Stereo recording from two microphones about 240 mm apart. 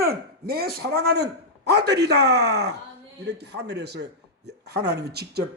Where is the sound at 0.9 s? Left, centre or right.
Right.